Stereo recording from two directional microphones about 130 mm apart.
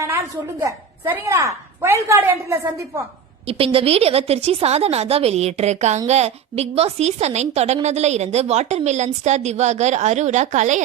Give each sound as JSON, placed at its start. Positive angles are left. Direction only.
{"t": 0.6, "sound": "a woman's voice", "side_deg": -20}
{"t": 3.4, "sound": "a woman's voice", "side_deg": -45}